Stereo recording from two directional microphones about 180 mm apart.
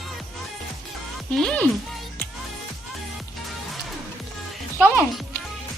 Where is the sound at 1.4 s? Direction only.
5° left (ahead or behind).